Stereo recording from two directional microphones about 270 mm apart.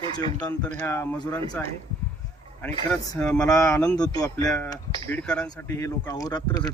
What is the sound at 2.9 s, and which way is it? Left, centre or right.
Speech, centre.